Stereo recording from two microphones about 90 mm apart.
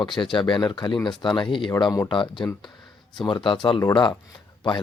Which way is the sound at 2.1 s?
65° left (ahead or behind).